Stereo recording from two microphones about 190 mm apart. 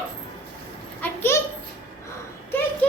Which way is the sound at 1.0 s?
10° left (ahead or behind).